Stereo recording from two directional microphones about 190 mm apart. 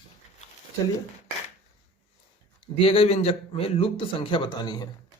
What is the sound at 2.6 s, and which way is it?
A man's voice, 30° left (ahead or behind).